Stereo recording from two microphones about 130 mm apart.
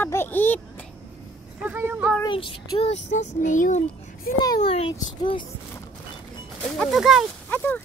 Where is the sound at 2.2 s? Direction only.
40° left (ahead or behind).